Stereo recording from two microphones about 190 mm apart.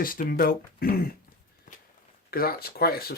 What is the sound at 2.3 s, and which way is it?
Speech, 50° left (ahead or behind).